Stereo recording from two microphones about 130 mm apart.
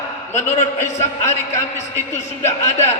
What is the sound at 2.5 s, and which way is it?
Speech, 60° left (ahead or behind).